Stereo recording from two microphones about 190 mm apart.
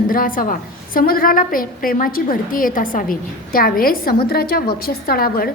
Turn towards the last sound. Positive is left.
turn(degrees=50)  # may be behind; listen again after turning